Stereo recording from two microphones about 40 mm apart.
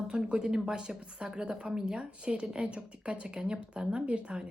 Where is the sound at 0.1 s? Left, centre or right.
Centre.